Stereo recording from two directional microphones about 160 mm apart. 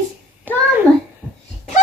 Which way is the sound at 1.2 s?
10° left (ahead or behind).